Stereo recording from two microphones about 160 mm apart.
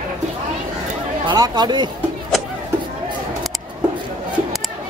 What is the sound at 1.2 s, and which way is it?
Speech, 25° right (ahead or behind).